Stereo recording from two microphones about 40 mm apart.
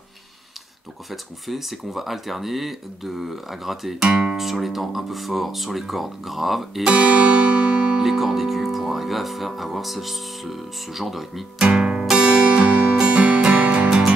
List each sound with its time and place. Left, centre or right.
1.1 s speech: centre
4.0 s speech: right
4.4 s speech: centre
6.9 s music: right
8.0 s speech: centre
11.6 s music: right